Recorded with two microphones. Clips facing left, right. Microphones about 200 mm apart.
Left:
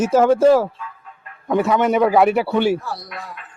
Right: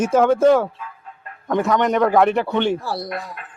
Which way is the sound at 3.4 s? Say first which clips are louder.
Right 3 dB; 50° right (ahead or behind).